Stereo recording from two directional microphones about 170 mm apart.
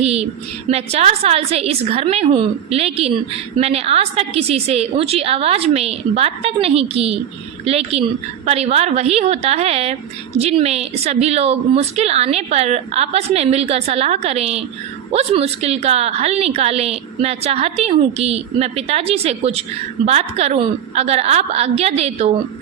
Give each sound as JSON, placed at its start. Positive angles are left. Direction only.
{"t": 0.0, "sound": "a woman's voice", "side_deg": -35}